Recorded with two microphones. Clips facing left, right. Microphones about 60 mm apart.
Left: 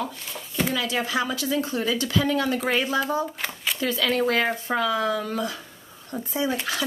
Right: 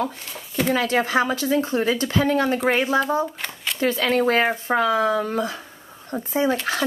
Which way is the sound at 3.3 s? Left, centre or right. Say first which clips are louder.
Even; centre.